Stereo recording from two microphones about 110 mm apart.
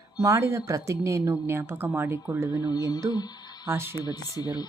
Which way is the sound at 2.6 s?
35° left (ahead or behind).